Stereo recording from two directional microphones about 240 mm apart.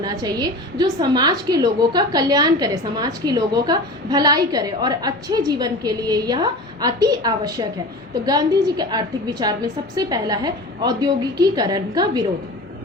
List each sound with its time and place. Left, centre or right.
0.0 s a woman's voice: centre